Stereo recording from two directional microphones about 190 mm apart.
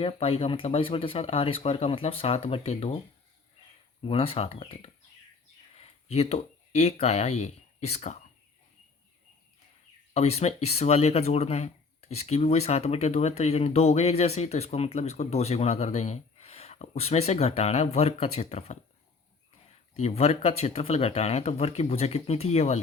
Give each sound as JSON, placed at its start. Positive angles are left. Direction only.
{"t": 0.0, "sound": "speech", "side_deg": 30}
{"t": 4.0, "sound": "speech", "side_deg": 30}
{"t": 10.2, "sound": "speech", "side_deg": 35}
{"t": 20.0, "sound": "speech", "side_deg": 35}